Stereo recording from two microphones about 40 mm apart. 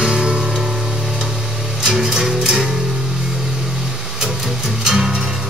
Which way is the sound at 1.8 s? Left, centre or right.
Centre.